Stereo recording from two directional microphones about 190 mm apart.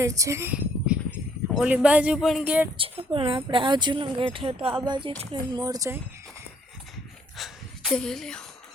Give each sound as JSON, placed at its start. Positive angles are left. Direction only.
{"t": 0.0, "sound": "a woman's voice", "side_deg": -15}
{"t": 2.7, "sound": "speech", "side_deg": -30}
{"t": 7.3, "sound": "a sound", "side_deg": 0}